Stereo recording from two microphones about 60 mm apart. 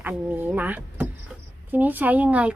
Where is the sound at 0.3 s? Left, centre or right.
Right.